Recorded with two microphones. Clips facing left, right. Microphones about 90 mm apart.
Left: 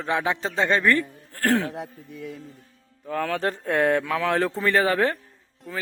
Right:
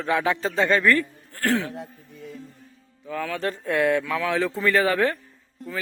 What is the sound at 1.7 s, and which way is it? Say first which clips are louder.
Speech: left 2 dB; 65° left (ahead or behind).